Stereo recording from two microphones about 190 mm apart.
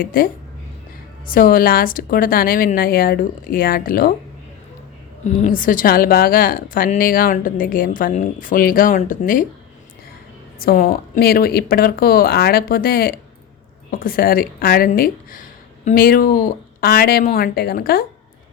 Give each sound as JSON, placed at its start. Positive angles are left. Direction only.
{"t": 0.0, "sound": "a woman's voice", "side_deg": 50}
{"t": 1.3, "sound": "a woman's voice", "side_deg": 45}
{"t": 5.2, "sound": "a woman's voice", "side_deg": 40}
{"t": 10.6, "sound": "a woman's voice", "side_deg": 50}